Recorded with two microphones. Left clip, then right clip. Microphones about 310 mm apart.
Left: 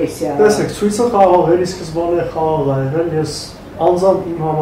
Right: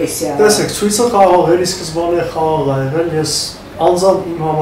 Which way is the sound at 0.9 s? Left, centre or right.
Centre.